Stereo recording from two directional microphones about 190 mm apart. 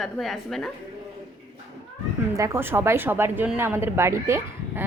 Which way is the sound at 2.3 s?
15° right (ahead or behind).